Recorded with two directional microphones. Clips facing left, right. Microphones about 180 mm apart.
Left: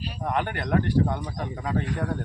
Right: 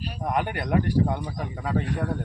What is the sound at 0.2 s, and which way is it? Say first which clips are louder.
Speech: right 1 dB; 10° right (ahead or behind).